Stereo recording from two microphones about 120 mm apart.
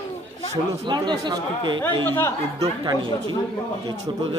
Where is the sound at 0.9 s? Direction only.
35° right (ahead or behind).